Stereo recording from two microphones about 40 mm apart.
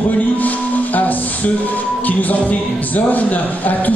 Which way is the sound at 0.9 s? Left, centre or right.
Left.